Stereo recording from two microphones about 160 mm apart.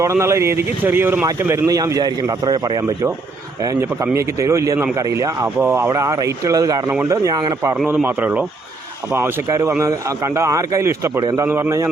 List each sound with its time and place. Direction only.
0.0 s speech: 15° right (ahead or behind)